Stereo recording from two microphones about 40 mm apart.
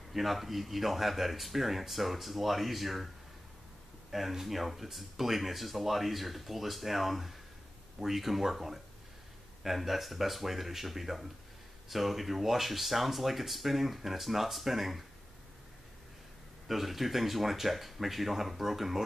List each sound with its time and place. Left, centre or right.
0.1 s speech: centre
4.1 s speech: centre
16.6 s speech: centre